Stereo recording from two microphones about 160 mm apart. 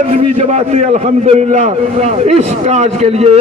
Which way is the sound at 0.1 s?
45° right (ahead or behind).